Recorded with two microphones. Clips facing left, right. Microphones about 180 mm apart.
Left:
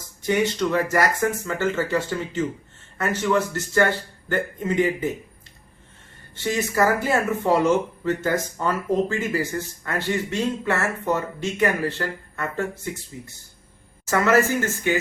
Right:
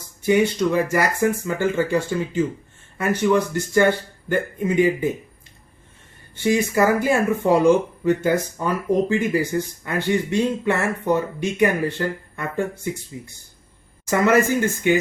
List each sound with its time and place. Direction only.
0.3 s speech: 10° right (ahead or behind)
6.3 s speech: 10° right (ahead or behind)